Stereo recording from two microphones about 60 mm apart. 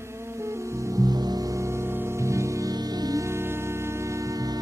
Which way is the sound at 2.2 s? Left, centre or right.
Right.